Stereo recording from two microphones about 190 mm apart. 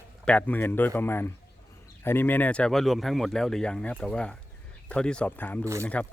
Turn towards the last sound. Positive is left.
turn(degrees=5)  # may be behind; listen again after turning